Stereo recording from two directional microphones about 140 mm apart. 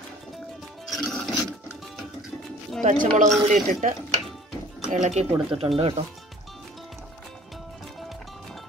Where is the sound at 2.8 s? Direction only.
60° right (ahead or behind).